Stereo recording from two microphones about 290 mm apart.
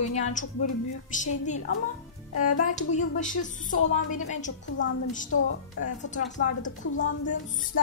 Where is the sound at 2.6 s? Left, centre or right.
Left.